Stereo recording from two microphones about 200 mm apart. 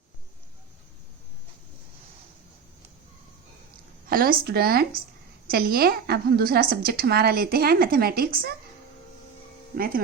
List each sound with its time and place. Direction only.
4.1 s a woman's voice: 45° right (ahead or behind)
9.7 s a woman's voice: 45° right (ahead or behind)